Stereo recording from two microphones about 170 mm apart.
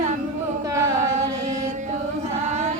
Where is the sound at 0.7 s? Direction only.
20° right (ahead or behind).